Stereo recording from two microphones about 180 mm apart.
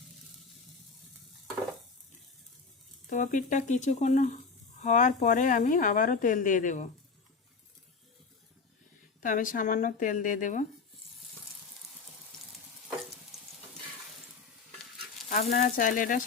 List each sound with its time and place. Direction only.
3.1 s a woman's voice: 45° left (ahead or behind)
9.2 s a woman's voice: 50° left (ahead or behind)
15.3 s a woman's voice: 45° left (ahead or behind)